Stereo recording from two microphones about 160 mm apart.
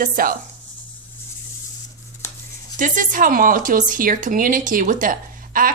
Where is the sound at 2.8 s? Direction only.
55° right (ahead or behind).